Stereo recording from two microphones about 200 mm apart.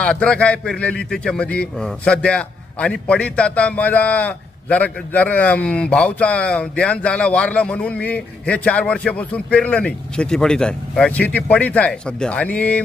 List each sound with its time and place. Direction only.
0.0 s a man's voice: 5° left (ahead or behind)